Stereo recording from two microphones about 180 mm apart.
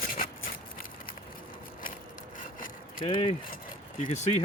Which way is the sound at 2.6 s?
50° left (ahead or behind).